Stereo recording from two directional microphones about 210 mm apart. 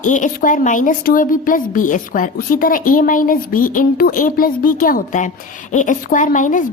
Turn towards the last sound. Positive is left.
turn(degrees=40)  # may be behind; listen again after turning